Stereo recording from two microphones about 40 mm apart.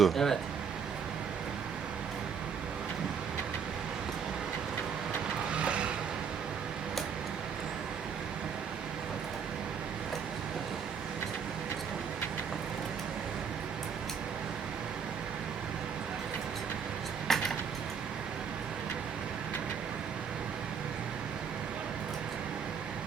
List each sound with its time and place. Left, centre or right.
0.0 s speech: centre
5.5 s vehicle: right
17.3 s a sound: centre